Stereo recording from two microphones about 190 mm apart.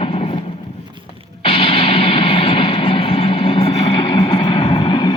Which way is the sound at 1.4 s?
30° left (ahead or behind).